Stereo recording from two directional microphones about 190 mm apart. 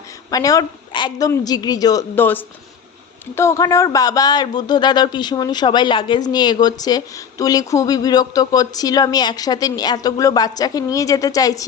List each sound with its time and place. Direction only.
0.3 s speech: 20° left (ahead or behind)